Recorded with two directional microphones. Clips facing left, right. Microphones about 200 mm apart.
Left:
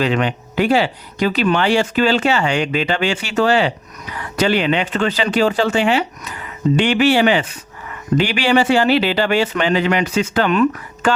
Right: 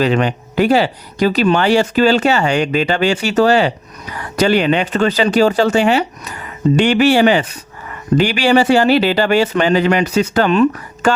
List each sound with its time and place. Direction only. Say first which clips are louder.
0.0 s speech: right 3 dB; 40° right (ahead or behind)